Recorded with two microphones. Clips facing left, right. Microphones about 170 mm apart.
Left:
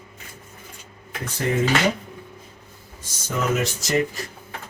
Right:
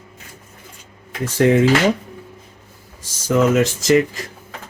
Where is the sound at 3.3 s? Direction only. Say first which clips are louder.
Right 9 dB; 90° right.